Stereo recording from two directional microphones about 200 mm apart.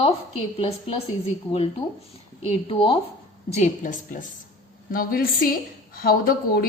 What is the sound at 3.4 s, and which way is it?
A woman's voice, 35° left (ahead or behind).